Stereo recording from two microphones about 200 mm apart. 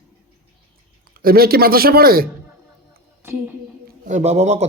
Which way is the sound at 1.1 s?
50° right (ahead or behind).